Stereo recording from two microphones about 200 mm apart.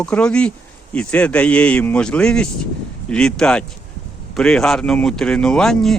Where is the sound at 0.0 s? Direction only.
5° left (ahead or behind).